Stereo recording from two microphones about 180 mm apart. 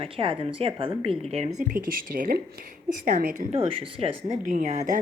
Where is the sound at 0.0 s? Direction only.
30° right (ahead or behind).